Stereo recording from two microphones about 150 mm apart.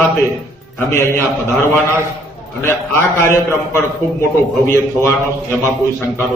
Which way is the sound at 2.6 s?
15° left (ahead or behind).